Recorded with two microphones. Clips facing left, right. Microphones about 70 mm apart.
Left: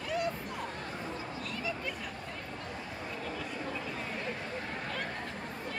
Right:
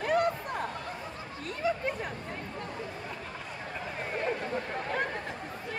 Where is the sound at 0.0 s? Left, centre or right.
Right.